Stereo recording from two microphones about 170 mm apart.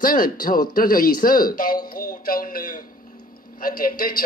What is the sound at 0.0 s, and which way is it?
A man's voice, 55° left (ahead or behind).